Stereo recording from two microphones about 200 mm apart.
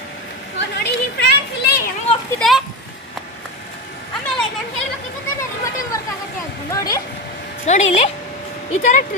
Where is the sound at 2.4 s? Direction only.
Centre (ahead or behind).